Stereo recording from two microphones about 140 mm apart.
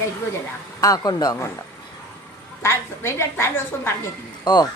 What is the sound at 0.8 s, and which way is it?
Speech, 25° left (ahead or behind).